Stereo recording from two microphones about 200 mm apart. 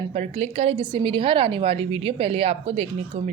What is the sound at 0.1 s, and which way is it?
A woman's voice, 30° right (ahead or behind).